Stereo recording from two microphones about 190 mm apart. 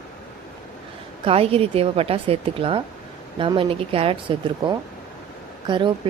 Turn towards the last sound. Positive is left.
turn(degrees=-25)  # may be behind; listen again after turning